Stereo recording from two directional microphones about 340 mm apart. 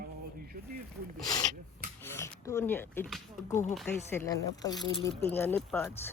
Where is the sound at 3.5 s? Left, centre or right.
Left.